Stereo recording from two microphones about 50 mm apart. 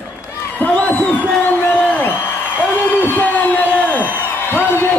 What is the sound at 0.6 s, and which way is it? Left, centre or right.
Crowd, left.